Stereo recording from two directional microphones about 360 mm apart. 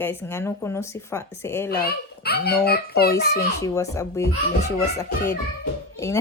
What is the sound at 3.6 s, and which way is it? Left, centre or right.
Speech, centre.